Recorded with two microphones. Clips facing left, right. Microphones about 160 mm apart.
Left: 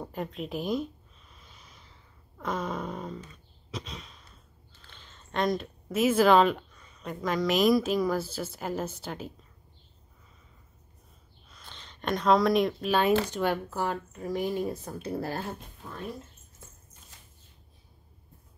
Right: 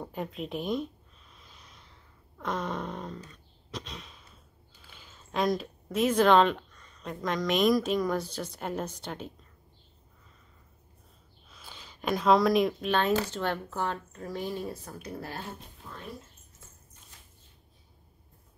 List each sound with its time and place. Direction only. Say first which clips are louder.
0.0 s speech: left 1 dB; centre (ahead or behind)
1.3 s a sound: even; centre (ahead or behind)
3.7 s sigh: left 1 dB; centre (ahead or behind)
4.7 s speech: even; 10° right (ahead or behind)
11.4 s speech: right 1 dB; 5° right (ahead or behind); by 15.0 s 20° left (ahead or behind)
15.1 s speech: left 7 dB; 40° left (ahead or behind)